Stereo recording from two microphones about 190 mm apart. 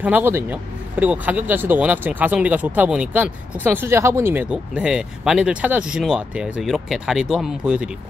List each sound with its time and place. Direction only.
0.0 s speech: 10° right (ahead or behind)